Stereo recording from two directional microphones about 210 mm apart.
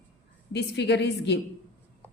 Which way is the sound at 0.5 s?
55° left (ahead or behind).